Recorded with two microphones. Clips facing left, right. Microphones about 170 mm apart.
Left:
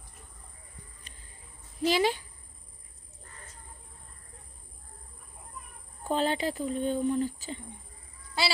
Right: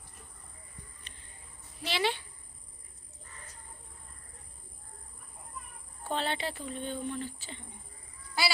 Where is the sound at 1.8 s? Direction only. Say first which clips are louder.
Left 6 dB; 40° left (ahead or behind).